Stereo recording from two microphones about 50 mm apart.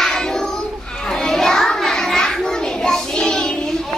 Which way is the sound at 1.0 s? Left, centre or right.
Centre.